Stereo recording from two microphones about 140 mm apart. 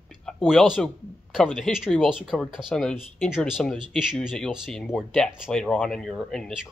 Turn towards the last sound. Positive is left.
turn(degrees=0)  # may be behind; listen again after turning